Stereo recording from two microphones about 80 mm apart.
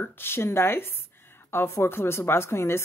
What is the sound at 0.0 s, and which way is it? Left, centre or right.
Speech, left.